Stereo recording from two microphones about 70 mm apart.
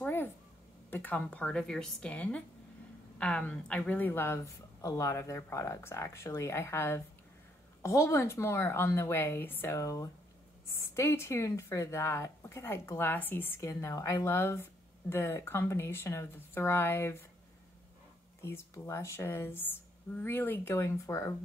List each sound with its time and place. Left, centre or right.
0.8 s a woman's voice: left
4.8 s speech: left
9.8 s speech: left
11.0 s speech: left
13.6 s speech: left
18.4 s speech: left